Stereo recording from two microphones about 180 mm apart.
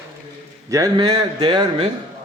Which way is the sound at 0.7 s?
20° right (ahead or behind).